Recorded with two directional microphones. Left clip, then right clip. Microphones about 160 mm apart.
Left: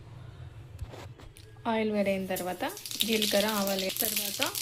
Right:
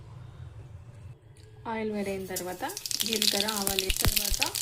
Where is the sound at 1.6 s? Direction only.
20° left (ahead or behind).